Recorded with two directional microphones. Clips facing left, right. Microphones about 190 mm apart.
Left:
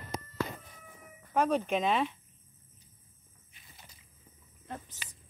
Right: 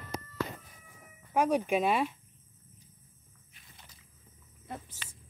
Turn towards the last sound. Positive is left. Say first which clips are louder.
# even
turn(degrees=10)  # may be behind; listen again after turning